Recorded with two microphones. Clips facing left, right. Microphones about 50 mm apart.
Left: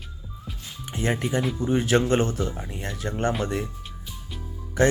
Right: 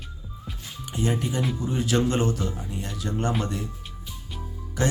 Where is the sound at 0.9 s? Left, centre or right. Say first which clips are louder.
Left 1 dB; left.